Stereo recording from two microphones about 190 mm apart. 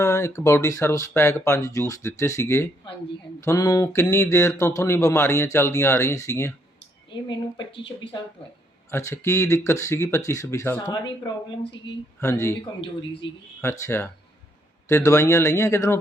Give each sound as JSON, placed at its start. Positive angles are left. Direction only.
{"t": 0.0, "sound": "speech", "side_deg": 15}
{"t": 8.9, "sound": "speech", "side_deg": 15}
{"t": 12.2, "sound": "speech", "side_deg": 15}
{"t": 13.2, "sound": "speech", "side_deg": 70}
{"t": 13.6, "sound": "speech", "side_deg": 15}